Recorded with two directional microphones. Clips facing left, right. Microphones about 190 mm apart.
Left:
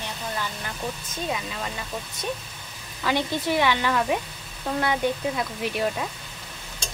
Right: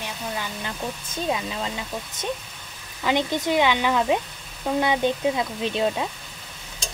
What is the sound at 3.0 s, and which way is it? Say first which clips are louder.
A woman's voice: right 2 dB; 20° right (ahead or behind).